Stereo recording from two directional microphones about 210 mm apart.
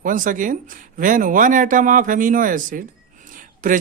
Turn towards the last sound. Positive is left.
turn(degrees=-40)  # may be behind; listen again after turning